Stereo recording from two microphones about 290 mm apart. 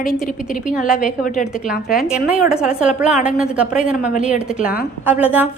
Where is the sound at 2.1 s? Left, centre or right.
Centre.